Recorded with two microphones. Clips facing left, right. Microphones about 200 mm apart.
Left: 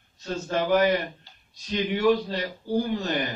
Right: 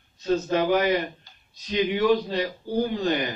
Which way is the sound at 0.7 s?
45° left (ahead or behind).